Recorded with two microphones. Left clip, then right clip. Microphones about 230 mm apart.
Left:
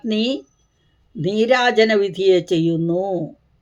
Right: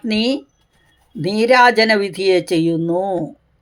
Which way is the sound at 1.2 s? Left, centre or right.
Right.